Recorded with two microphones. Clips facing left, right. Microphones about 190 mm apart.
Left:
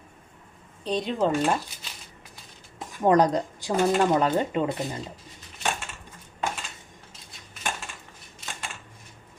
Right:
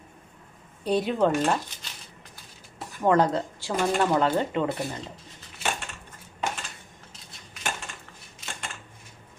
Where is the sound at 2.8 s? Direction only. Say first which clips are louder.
Left 2 dB; 15° left (ahead or behind).